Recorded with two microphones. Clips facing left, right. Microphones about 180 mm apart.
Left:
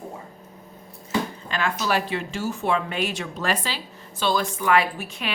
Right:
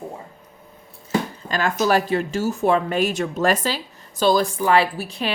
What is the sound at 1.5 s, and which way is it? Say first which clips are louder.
A woman's voice: right 5 dB; 40° right (ahead or behind).